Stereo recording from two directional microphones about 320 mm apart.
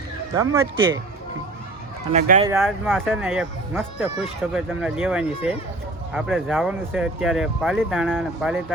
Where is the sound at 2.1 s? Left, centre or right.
Right.